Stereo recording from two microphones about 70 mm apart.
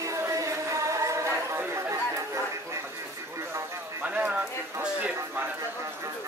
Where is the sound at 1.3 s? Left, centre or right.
Right.